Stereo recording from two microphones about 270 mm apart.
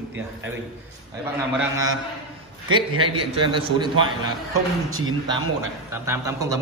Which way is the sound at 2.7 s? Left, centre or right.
Centre.